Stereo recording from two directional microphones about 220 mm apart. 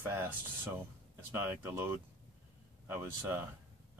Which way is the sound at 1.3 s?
10° right (ahead or behind).